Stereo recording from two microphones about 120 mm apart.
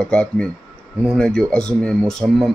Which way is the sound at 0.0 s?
5° left (ahead or behind).